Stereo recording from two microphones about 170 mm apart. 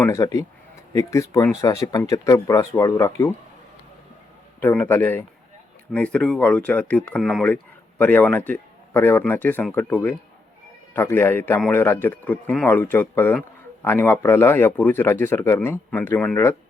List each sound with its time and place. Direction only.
0.0 s speech: 15° left (ahead or behind)
4.6 s speech: 10° left (ahead or behind)